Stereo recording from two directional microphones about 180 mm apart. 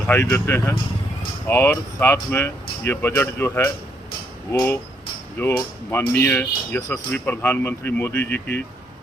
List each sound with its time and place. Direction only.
0.1 s speech: 10° left (ahead or behind)